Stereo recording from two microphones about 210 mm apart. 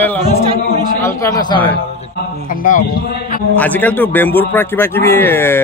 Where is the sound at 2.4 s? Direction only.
40° left (ahead or behind).